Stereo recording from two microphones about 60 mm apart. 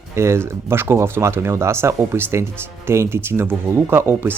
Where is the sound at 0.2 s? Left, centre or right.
Right.